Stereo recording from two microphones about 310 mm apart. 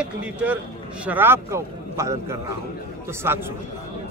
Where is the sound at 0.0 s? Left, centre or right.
Centre.